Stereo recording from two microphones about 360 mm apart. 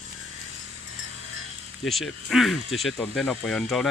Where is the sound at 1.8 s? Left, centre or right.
Centre.